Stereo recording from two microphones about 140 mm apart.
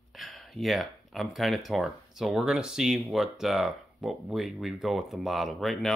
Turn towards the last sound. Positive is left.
turn(degrees=0)  # may be behind; listen again after turning